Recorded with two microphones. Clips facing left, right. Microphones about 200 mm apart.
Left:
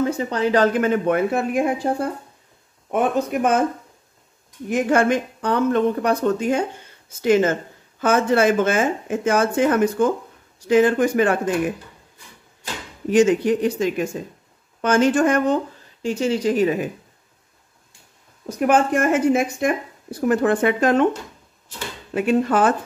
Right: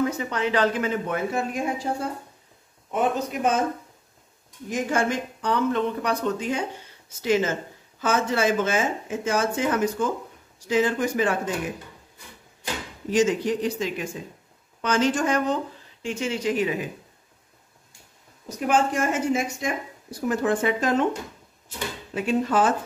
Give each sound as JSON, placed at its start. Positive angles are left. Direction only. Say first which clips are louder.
{"t": 0.0, "sound": "speech", "louder": "left 4 dB", "side_deg": 30}
{"t": 0.7, "sound": "speech", "louder": "left 7 dB", "side_deg": 60}
{"t": 4.6, "sound": "speech", "louder": "left 7 dB", "side_deg": 60}
{"t": 13.1, "sound": "speech", "louder": "left 6 dB", "side_deg": 60}
{"t": 16.0, "sound": "speech", "louder": "left 7 dB", "side_deg": 35}
{"t": 18.6, "sound": "speech", "louder": "left 5 dB", "side_deg": 60}
{"t": 22.1, "sound": "speech", "louder": "left 5 dB", "side_deg": 60}